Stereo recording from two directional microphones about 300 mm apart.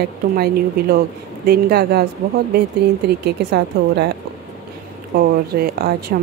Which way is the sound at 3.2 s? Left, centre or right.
Right.